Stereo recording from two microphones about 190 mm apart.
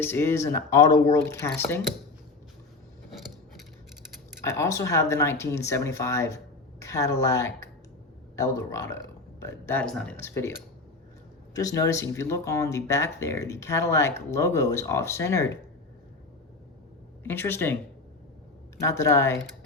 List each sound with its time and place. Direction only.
0.0 s speech: 10° left (ahead or behind)
3.1 s coin: centre (ahead or behind)
4.4 s speech: 15° left (ahead or behind)
11.5 s speech: 15° left (ahead or behind)
17.2 s speech: 10° left (ahead or behind)
18.8 s speech: 15° left (ahead or behind)